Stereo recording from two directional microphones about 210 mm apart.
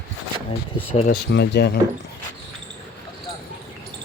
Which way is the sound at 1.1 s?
50° left (ahead or behind).